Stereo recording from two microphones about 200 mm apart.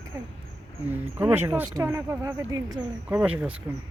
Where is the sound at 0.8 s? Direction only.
10° right (ahead or behind).